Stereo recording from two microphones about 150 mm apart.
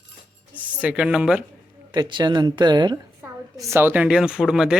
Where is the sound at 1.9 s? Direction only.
30° right (ahead or behind).